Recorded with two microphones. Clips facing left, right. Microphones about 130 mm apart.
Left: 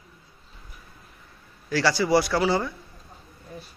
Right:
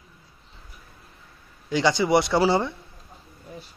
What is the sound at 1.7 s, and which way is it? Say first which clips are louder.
A man's voice: right 1 dB; 20° right (ahead or behind).